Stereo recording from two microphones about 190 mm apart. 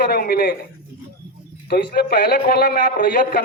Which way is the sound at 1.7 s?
55° left (ahead or behind).